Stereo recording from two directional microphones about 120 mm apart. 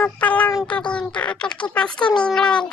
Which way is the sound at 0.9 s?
10° left (ahead or behind).